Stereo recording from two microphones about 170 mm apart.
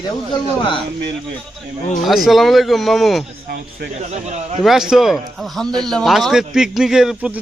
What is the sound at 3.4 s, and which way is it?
Speech, 60° right (ahead or behind).